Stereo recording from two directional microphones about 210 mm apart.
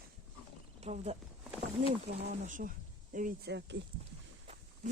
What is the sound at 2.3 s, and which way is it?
Speech, 35° right (ahead or behind).